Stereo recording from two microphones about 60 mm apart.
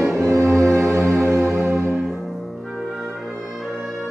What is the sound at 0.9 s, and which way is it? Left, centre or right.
Music, right.